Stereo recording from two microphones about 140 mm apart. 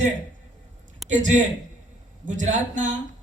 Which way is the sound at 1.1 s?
60° right (ahead or behind).